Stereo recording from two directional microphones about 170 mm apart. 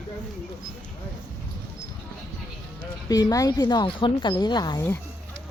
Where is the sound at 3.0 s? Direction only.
20° left (ahead or behind).